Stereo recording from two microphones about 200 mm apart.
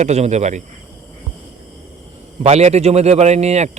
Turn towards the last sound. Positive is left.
turn(degrees=-35)  # may be behind; listen again after turning